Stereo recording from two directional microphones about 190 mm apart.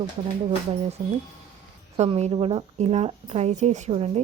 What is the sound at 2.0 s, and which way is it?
A woman's voice, 35° right (ahead or behind).